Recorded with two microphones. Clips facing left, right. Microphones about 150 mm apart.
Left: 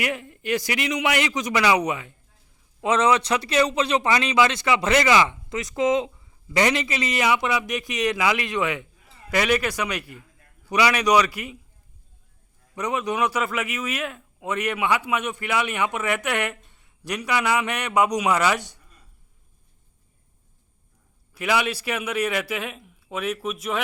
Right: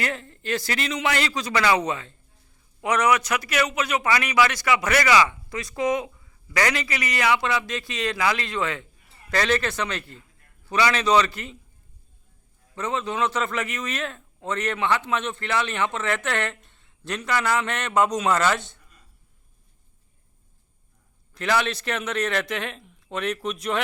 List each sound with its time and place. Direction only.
0.0 s a man's voice: 15° left (ahead or behind)
2.8 s a man's voice: 25° left (ahead or behind)
12.7 s a man's voice: 15° left (ahead or behind)
21.3 s a man's voice: 10° left (ahead or behind)